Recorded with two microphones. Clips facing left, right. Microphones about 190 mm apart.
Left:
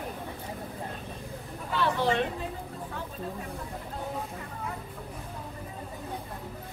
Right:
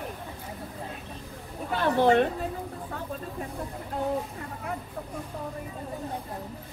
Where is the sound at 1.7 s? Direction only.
45° right (ahead or behind).